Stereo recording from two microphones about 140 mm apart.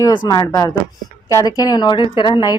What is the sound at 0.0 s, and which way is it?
Speech, 30° left (ahead or behind).